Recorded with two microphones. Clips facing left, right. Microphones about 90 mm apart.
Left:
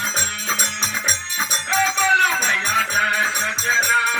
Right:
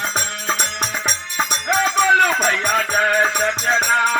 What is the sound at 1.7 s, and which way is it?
Music, 60° right (ahead or behind).